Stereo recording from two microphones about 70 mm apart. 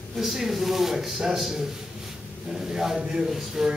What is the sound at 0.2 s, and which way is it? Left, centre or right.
A man's voice, centre.